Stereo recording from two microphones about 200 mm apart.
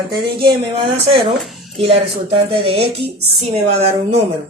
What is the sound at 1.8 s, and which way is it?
Speech, 30° right (ahead or behind).